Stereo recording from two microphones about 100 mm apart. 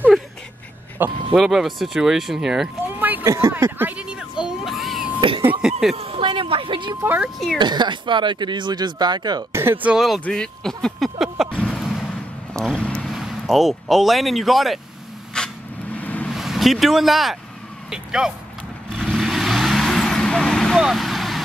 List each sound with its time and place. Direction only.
1.0 s speech: 20° right (ahead or behind)
1.3 s speech: 5° right (ahead or behind)
3.0 s a sound: 15° right (ahead or behind)
3.3 s speech: 25° right (ahead or behind)
4.0 s a sound: 10° right (ahead or behind)
5.9 s speech: 75° right (ahead or behind); by 9.4 s 45° right (ahead or behind)
9.5 s speech: 25° right (ahead or behind)
9.8 s speech: 5° right (ahead or behind)
10.2 s speech: 10° left (ahead or behind)
11.5 s vehicle: 5° left (ahead or behind)
13.1 s speech: centre (ahead or behind)
15.3 s a sound: 10° left (ahead or behind)
16.3 s speech: centre (ahead or behind)
18.9 s vehicle: centre (ahead or behind)